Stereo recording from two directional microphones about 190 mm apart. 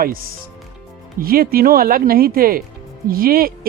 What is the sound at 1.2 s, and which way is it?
Speech, 50° right (ahead or behind).